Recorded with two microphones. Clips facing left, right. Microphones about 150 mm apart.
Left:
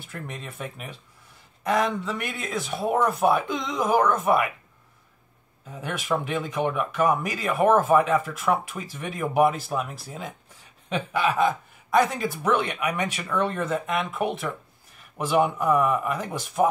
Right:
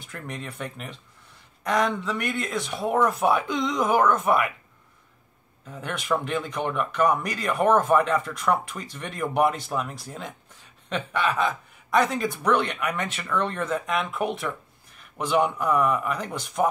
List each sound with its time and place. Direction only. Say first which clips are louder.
0.0 s speech: right 1 dB; 5° left (ahead or behind)
5.7 s speech: even; 5° left (ahead or behind)